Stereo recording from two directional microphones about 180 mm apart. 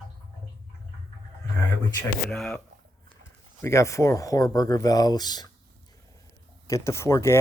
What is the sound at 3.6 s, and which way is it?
Speech, 15° left (ahead or behind).